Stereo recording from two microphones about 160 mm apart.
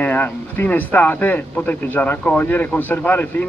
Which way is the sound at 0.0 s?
10° left (ahead or behind).